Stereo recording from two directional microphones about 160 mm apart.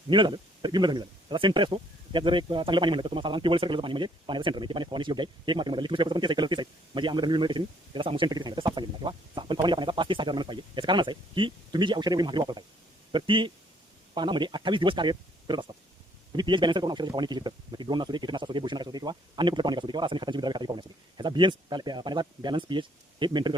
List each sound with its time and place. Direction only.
0.1 s a man's voice: 30° right (ahead or behind)